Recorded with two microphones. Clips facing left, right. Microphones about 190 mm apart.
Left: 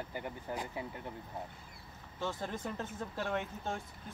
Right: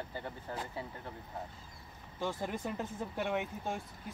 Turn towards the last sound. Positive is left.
turn(degrees=-15)  # may be behind; listen again after turning